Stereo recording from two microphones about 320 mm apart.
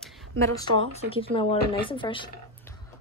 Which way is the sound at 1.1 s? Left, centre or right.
Centre.